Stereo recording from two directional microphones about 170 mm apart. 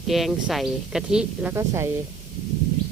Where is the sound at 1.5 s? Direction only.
15° right (ahead or behind).